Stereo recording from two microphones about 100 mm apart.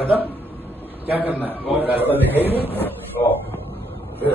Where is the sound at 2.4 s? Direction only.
75° left (ahead or behind).